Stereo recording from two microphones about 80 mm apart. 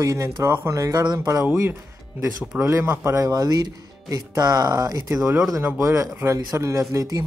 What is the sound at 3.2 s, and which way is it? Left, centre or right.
Speech, right.